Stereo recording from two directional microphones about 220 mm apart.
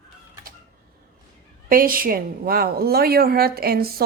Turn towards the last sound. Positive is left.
turn(degrees=-45)  # may be behind; listen again after turning